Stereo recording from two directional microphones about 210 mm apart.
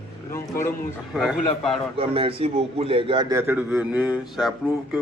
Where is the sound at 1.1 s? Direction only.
Centre (ahead or behind).